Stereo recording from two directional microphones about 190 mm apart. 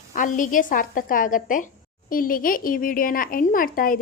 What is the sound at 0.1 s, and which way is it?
Speech, 45° left (ahead or behind).